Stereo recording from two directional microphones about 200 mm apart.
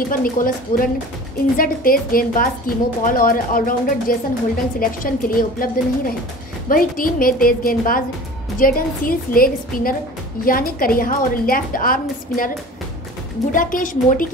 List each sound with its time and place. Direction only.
0.1 s a woman's voice: 45° left (ahead or behind)
13.5 s a woman's voice: 40° left (ahead or behind)